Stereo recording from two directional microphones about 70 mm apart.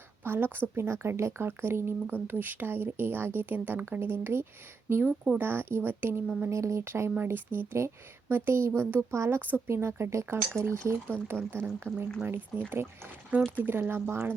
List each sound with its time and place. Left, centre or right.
0.3 s speech: right
6.5 s speech: right
11.1 s speech: right